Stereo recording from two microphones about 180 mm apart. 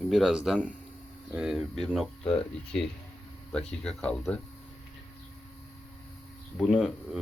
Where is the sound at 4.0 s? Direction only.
5° left (ahead or behind).